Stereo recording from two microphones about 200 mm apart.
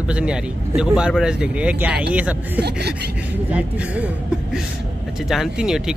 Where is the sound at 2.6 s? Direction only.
55° right (ahead or behind).